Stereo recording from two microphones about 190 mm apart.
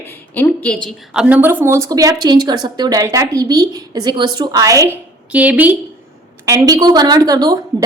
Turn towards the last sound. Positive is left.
turn(degrees=-20)  # may be behind; listen again after turning